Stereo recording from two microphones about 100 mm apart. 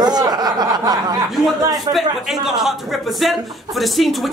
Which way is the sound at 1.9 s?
5° right (ahead or behind).